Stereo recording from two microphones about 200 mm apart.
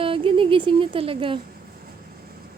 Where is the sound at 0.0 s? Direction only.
25° right (ahead or behind).